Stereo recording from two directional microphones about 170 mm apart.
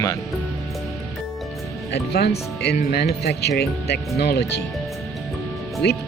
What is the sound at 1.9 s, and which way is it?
Speech, 70° left (ahead or behind).